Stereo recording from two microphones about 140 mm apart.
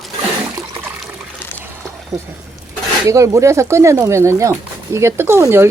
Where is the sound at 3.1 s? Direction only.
20° right (ahead or behind).